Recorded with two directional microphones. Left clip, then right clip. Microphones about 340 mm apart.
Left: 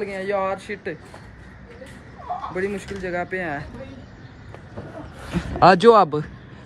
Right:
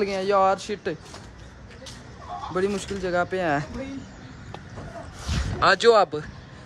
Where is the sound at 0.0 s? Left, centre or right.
Centre.